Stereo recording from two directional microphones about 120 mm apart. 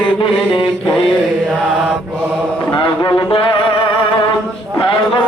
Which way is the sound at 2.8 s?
35° left (ahead or behind).